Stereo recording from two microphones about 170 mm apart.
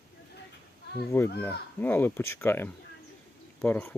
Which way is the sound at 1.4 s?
10° left (ahead or behind).